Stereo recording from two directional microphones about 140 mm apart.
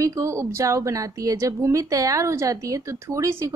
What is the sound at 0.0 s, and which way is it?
A woman's voice, 25° right (ahead or behind).